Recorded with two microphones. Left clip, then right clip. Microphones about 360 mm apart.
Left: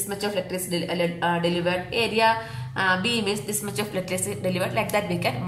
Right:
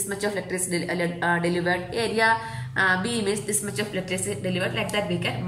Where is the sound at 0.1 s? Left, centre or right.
Centre.